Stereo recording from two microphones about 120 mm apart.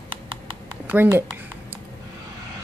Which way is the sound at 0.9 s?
15° right (ahead or behind).